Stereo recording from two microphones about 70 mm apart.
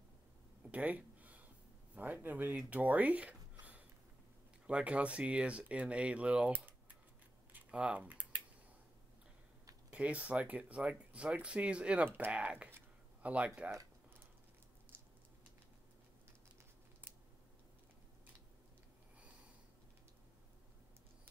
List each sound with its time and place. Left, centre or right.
0.7 s a sound: right
2.0 s speech: right
6.5 s typing: right
7.5 s typing: centre
9.9 s speech: centre